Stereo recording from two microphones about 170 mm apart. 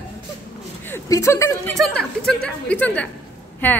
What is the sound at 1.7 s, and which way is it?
Speech, 5° left (ahead or behind).